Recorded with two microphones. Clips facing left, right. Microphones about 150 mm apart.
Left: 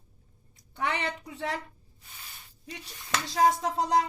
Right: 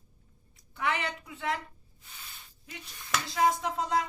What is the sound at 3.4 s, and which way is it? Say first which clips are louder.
Speech: left 3 dB; 35° left (ahead or behind).